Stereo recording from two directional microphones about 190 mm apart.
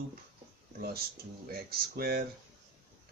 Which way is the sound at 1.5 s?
55° right (ahead or behind).